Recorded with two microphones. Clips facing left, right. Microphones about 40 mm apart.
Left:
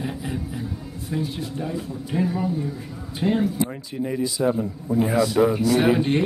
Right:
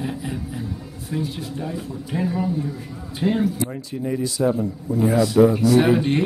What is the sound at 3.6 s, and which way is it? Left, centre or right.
A man's voice, centre.